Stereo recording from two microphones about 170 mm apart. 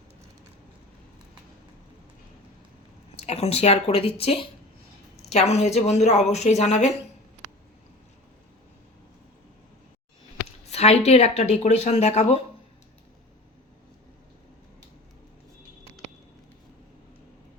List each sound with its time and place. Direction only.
3.2 s speech: 35° left (ahead or behind)
10.7 s speech: 40° left (ahead or behind)